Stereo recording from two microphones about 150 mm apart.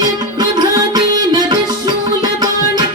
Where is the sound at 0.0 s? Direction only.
25° right (ahead or behind).